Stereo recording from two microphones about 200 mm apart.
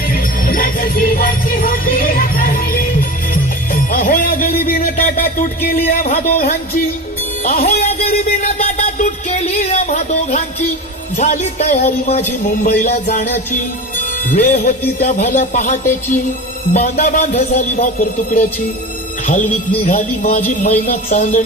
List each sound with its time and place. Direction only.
0.1 s jingle bell: 45° left (ahead or behind)
3.9 s speech: 45° left (ahead or behind)
7.6 s music: 45° left (ahead or behind)
8.5 s music: 30° left (ahead or behind)
11.2 s speech: 35° left (ahead or behind)